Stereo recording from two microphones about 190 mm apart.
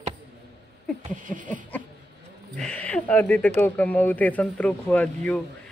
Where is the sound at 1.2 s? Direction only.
45° right (ahead or behind).